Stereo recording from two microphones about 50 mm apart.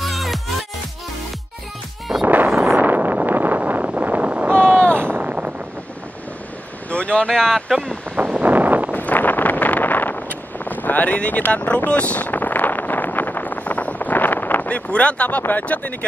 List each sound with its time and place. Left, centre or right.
0.0 s music: centre
2.2 s a sound: right
2.8 s vehicle: right
4.9 s a sound: right
5.2 s wind noise: right
6.9 s vehicle: left
7.3 s speech: centre
8.3 s wind: right
8.9 s wind noise: left
11.2 s a sound: left
14.9 s speech: left